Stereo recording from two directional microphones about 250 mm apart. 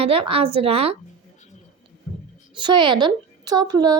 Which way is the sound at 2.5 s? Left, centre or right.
Centre.